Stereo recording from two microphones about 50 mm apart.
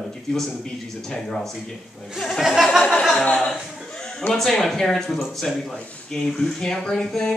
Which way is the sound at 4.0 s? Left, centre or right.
Centre.